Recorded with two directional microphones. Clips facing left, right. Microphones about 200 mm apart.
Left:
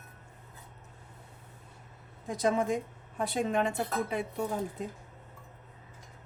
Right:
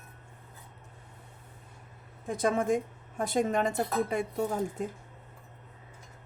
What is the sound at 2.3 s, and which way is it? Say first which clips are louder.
Dishes: right 1 dB; 50° right (ahead or behind).